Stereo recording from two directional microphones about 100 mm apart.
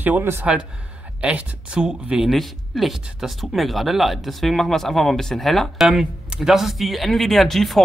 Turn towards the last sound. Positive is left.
turn(degrees=0)  # may be behind; listen again after turning